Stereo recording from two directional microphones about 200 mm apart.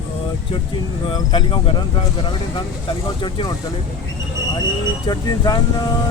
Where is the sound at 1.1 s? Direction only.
25° left (ahead or behind).